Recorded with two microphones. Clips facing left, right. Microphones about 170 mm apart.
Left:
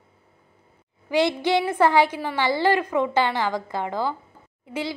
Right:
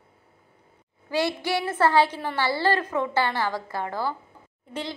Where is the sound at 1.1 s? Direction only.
20° left (ahead or behind).